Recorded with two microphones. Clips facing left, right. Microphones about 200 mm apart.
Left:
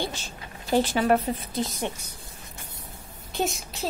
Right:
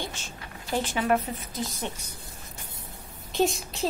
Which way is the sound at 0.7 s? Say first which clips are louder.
Left 4 dB; 35° left (ahead or behind).